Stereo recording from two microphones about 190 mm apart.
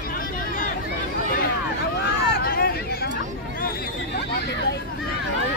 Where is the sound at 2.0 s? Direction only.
60° left (ahead or behind).